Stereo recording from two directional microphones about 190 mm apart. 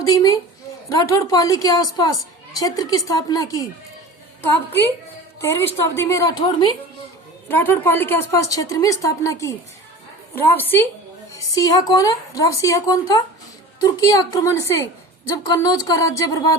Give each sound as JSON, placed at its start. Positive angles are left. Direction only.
{"t": 0.0, "sound": "a woman's voice", "side_deg": 20}